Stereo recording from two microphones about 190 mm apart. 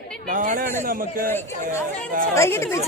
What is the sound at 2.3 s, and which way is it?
Speech, 15° left (ahead or behind).